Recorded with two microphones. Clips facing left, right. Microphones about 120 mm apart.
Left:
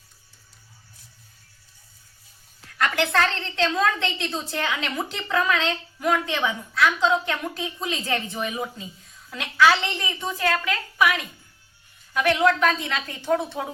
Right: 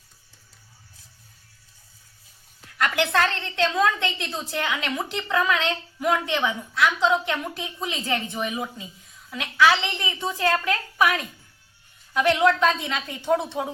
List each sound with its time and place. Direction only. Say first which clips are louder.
2.7 s a woman's voice: even; 15° right (ahead or behind)
10.3 s a woman's voice: right 2 dB; 25° right (ahead or behind)
10.9 s a woman's voice: even; 35° right (ahead or behind)
12.1 s a woman's voice: right 1 dB; 20° right (ahead or behind)